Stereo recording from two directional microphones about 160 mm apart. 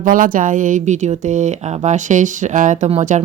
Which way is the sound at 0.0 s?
60° right (ahead or behind).